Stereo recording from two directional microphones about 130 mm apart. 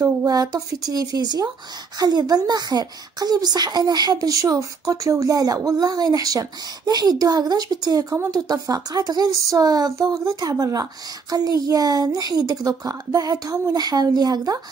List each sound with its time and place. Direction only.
0.0 s speech: 25° right (ahead or behind)